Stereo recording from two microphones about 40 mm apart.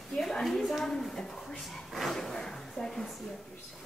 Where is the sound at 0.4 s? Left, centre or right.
Centre.